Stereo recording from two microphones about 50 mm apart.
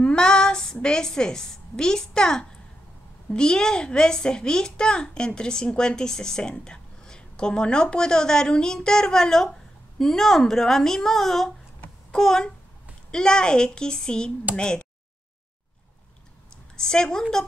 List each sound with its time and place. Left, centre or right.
0.0 s a woman's voice: centre
16.7 s a child's voice: centre